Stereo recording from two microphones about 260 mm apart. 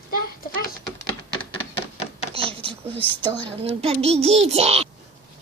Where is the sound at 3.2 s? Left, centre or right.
Centre.